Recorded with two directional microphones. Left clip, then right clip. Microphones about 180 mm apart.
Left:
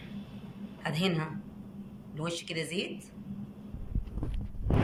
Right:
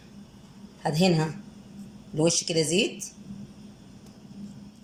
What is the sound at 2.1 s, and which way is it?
Speech, 55° right (ahead or behind).